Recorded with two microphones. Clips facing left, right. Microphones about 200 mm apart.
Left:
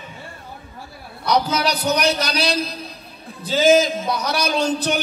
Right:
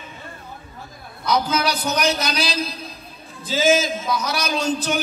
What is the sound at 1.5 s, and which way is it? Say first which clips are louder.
Speech: left 2 dB; 40° left (ahead or behind).